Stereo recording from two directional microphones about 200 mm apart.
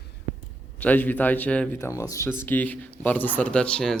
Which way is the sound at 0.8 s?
10° left (ahead or behind).